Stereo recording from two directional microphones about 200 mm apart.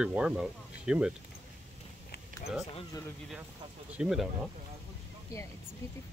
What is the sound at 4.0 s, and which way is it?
Speech, centre (ahead or behind).